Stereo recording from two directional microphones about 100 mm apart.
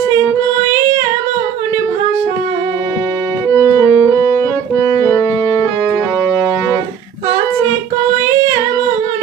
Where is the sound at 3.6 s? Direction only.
35° left (ahead or behind).